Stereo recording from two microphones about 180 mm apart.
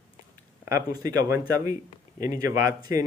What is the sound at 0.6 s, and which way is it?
A man's voice, 15° right (ahead or behind).